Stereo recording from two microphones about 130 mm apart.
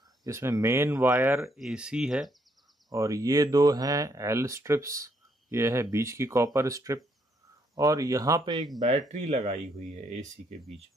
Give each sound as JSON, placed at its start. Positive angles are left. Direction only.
{"t": 0.2, "sound": "speech", "side_deg": -20}
{"t": 1.5, "sound": "speech", "side_deg": -5}
{"t": 2.9, "sound": "speech", "side_deg": -25}
{"t": 9.1, "sound": "speech", "side_deg": -60}